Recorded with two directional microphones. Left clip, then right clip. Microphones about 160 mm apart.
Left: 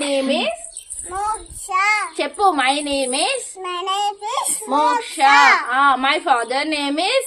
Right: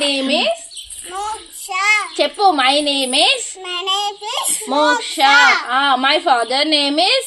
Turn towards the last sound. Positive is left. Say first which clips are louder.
# right 5 dB
turn(degrees=-50)  # may be behind; listen again after turning